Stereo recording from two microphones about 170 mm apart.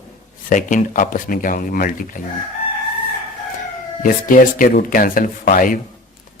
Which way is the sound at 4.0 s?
50° left (ahead or behind).